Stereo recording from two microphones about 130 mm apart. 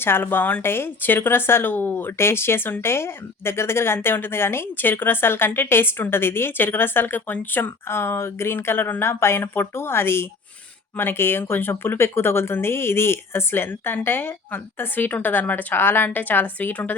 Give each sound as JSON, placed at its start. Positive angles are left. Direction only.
{"t": 0.0, "sound": "speech", "side_deg": 15}